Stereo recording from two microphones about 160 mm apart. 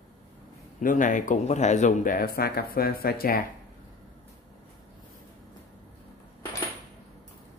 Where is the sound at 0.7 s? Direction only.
55° left (ahead or behind); by 3.4 s 70° left (ahead or behind).